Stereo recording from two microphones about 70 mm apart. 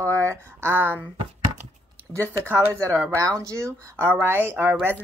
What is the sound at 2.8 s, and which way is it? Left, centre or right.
A woman's voice, right.